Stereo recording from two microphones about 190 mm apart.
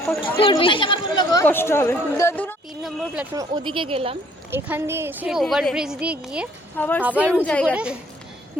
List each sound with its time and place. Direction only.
0.2 s a woman's voice: 25° left (ahead or behind); by 2.6 s 10° left (ahead or behind)
3.3 s a woman's voice: 25° right (ahead or behind)
4.5 s a woman's voice: 10° right (ahead or behind)
6.7 s a woman's voice: 10° left (ahead or behind)
7.2 s a woman's voice: 5° right (ahead or behind)
7.4 s a woman's voice: 5° left (ahead or behind)
7.7 s speech: 5° right (ahead or behind)